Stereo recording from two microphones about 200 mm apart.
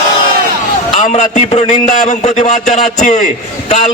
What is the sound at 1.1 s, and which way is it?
A man's voice, 35° left (ahead or behind).